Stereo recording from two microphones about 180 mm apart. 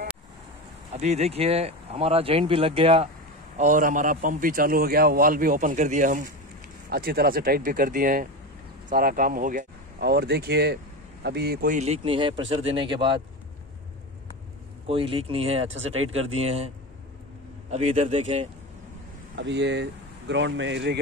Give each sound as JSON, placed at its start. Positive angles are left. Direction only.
{"t": 0.9, "sound": "speech", "side_deg": -40}
{"t": 3.5, "sound": "a man's voice", "side_deg": -45}
{"t": 6.9, "sound": "a man's voice", "side_deg": -60}
{"t": 11.8, "sound": "speech", "side_deg": -35}
{"t": 14.9, "sound": "speech", "side_deg": -30}
{"t": 19.3, "sound": "speech", "side_deg": -75}